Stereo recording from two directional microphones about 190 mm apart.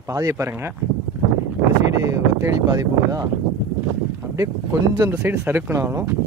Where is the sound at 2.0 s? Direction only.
15° right (ahead or behind).